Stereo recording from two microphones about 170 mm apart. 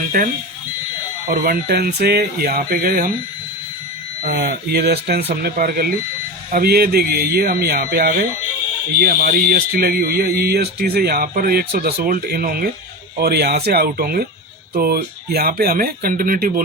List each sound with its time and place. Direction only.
0.1 s speech: 65° right (ahead or behind)
4.2 s speech: 65° right (ahead or behind)
13.1 s speech: 70° right (ahead or behind)